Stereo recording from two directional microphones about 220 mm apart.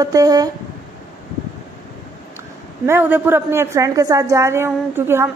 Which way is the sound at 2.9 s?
10° right (ahead or behind).